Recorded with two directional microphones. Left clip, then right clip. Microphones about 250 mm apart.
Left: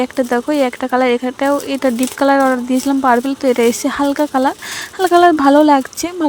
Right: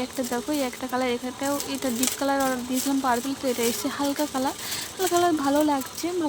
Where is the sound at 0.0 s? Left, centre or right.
Left.